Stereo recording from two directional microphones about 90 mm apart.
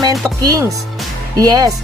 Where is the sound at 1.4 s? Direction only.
45° right (ahead or behind).